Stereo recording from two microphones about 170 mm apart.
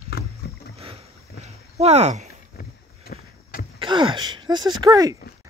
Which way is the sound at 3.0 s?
60° left (ahead or behind).